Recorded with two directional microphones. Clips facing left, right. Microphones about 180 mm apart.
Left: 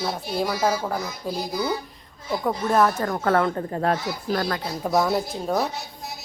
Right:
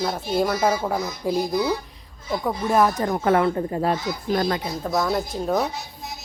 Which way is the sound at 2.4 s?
10° right (ahead or behind).